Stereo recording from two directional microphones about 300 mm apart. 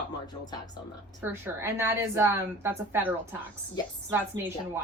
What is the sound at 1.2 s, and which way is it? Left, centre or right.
A woman's voice, centre.